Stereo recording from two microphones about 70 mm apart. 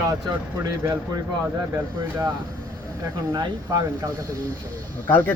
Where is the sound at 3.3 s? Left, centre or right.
Right.